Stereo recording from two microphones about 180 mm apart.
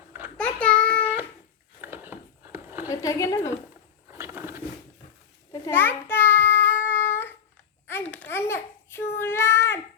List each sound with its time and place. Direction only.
0.3 s child singing: 5° left (ahead or behind)
1.8 s a sound: 10° right (ahead or behind)
2.9 s a woman's voice: 20° left (ahead or behind)
4.1 s a sound: 15° right (ahead or behind)
5.5 s child singing: 15° left (ahead or behind)
7.9 s babbling: 10° left (ahead or behind)